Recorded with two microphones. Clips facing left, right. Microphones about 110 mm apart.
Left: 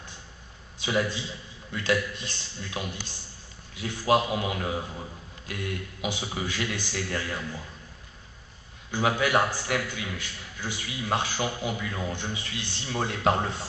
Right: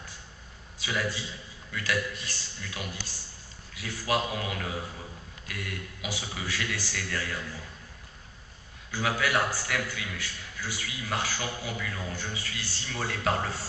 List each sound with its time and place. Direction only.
0.7 s a man's voice: 25° left (ahead or behind)
8.9 s a man's voice: 25° left (ahead or behind)